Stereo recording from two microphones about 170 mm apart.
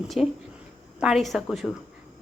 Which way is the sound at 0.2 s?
5° right (ahead or behind).